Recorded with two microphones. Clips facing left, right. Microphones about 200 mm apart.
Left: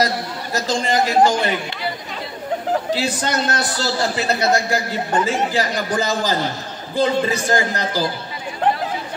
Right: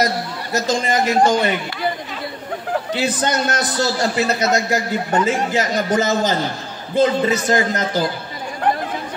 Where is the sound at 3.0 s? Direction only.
20° right (ahead or behind).